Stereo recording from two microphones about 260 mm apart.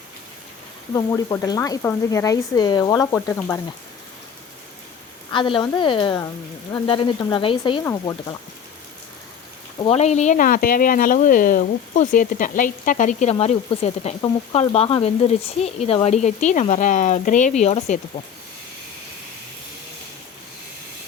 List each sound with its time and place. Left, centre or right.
0.9 s speech: centre
5.3 s speech: centre
9.8 s speech: left